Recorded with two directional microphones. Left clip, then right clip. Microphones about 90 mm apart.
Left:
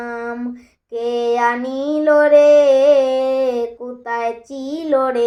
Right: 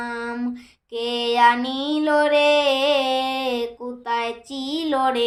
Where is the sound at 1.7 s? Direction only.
20° right (ahead or behind).